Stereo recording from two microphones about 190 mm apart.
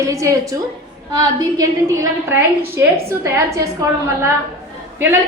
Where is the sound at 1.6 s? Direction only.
15° right (ahead or behind).